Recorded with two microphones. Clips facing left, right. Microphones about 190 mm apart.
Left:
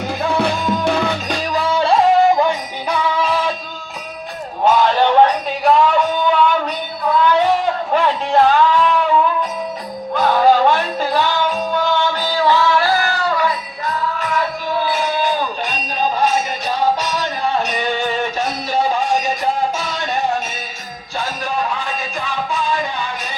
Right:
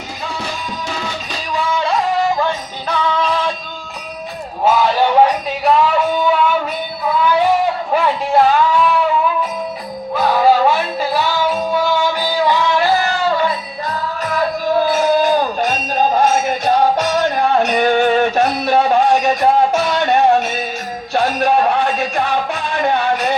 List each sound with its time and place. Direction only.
0.2 s music: 60° left (ahead or behind)
1.5 s music: 35° left (ahead or behind)
2.3 s music: 15° left (ahead or behind)
4.6 s music: 5° right (ahead or behind)
10.2 s music: 5° right (ahead or behind)
13.3 s music: 30° right (ahead or behind)
14.8 s a sound: 45° right (ahead or behind); by 20.5 s 60° right (ahead or behind)
21.1 s music: 70° right (ahead or behind)